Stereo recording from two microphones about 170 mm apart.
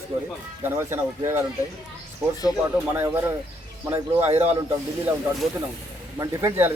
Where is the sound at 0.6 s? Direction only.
15° right (ahead or behind).